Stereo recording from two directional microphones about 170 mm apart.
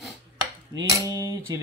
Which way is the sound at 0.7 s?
20° right (ahead or behind).